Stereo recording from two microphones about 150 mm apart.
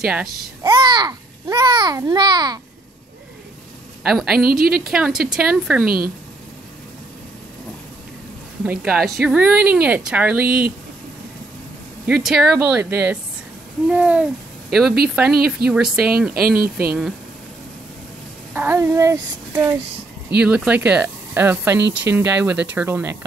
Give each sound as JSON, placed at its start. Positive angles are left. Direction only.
{"t": 0.0, "sound": "speech", "side_deg": -5}
{"t": 0.7, "sound": "a child's voice", "side_deg": -30}
{"t": 4.0, "sound": "speech", "side_deg": -5}
{"t": 4.5, "sound": "a woman's voice", "side_deg": -85}
{"t": 4.9, "sound": "speech", "side_deg": -5}
{"t": 5.9, "sound": "a woman's voice", "side_deg": -85}
{"t": 8.6, "sound": "speech", "side_deg": -5}
{"t": 12.1, "sound": "speech", "side_deg": -5}
{"t": 18.5, "sound": "speech", "side_deg": -15}
{"t": 20.3, "sound": "speech", "side_deg": -10}